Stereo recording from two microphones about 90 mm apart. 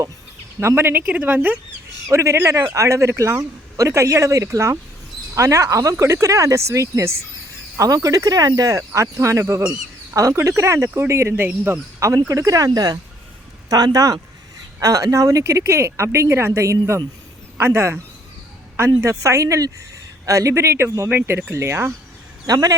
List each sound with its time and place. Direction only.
0.8 s speech: 25° right (ahead or behind)
2.0 s speech: 30° right (ahead or behind)
11.4 s speech: 15° right (ahead or behind)
11.9 s speech: 35° right (ahead or behind)
17.6 s speech: 30° right (ahead or behind)
19.0 s speech: 35° right (ahead or behind)
22.4 s speech: 40° right (ahead or behind)